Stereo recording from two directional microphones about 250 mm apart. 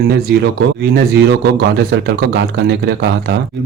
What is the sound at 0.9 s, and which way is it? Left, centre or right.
A man's voice, right.